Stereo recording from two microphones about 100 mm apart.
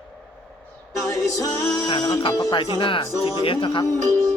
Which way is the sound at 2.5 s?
55° left (ahead or behind).